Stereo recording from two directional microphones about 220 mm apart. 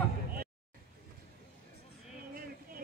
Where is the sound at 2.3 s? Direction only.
40° right (ahead or behind).